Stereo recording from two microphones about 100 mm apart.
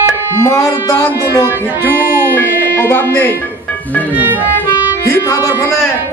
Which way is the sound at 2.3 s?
20° left (ahead or behind).